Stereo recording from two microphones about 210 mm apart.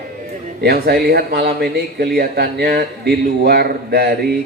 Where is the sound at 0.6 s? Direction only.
50° right (ahead or behind).